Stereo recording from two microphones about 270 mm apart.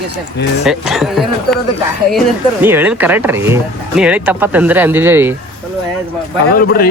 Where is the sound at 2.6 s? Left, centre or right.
Centre.